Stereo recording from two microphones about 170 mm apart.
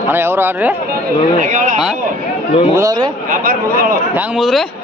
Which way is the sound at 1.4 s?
50° right (ahead or behind).